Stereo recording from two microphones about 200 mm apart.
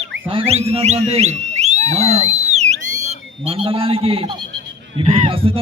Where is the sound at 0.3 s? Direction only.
30° right (ahead or behind).